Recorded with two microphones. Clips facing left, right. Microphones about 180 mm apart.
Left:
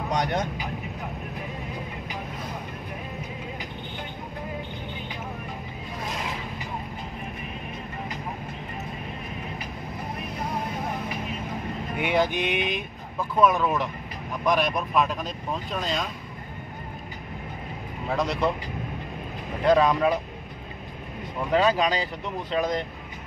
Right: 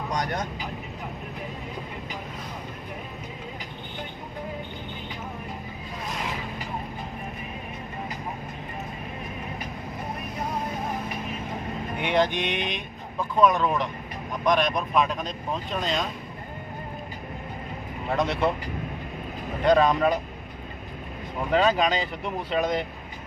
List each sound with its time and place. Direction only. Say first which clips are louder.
0.1 s speech: left 3 dB; 25° left (ahead or behind)
12.0 s speech: even; 5° left (ahead or behind)
18.1 s speech: right 1 dB; centre (ahead or behind)
19.6 s speech: even; centre (ahead or behind)
21.5 s speech: even; centre (ahead or behind)